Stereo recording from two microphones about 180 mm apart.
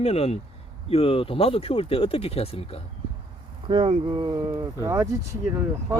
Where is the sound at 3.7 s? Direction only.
25° right (ahead or behind).